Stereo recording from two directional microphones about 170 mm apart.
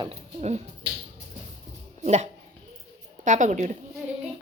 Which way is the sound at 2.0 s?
45° right (ahead or behind).